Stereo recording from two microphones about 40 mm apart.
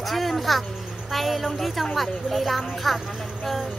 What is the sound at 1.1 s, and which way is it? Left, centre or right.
Speech, centre.